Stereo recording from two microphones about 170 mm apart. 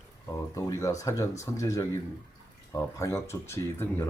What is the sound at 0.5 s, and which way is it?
A man's voice, 20° left (ahead or behind).